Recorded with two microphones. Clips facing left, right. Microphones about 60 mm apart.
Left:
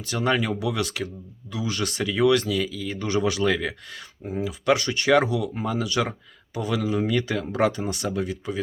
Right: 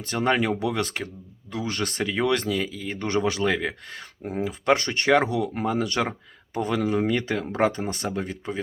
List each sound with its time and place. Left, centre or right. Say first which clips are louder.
0.0 s speech: right 1 dB; right